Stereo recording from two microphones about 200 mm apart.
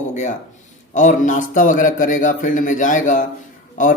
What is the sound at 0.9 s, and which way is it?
A man's voice, 40° left (ahead or behind).